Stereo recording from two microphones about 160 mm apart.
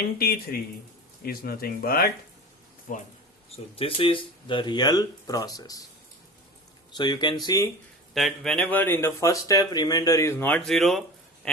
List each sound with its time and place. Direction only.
0.2 s speech: 70° left (ahead or behind)
3.5 s speech: 35° left (ahead or behind)
6.9 s speech: 25° left (ahead or behind)
8.1 s speech: centre (ahead or behind)
11.4 s a sound: 5° left (ahead or behind)